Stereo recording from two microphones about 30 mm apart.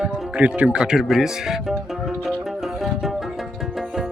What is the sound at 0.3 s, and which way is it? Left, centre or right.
Speech, right.